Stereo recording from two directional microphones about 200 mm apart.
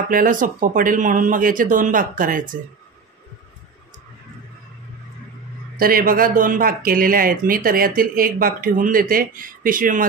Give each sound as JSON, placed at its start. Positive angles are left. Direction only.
{"t": 0.1, "sound": "speech", "side_deg": -40}
{"t": 5.8, "sound": "speech", "side_deg": -45}